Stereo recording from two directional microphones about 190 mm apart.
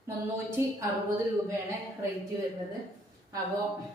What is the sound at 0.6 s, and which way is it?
Speech, 10° right (ahead or behind).